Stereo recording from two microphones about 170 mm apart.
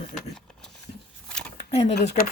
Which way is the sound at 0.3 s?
5° left (ahead or behind).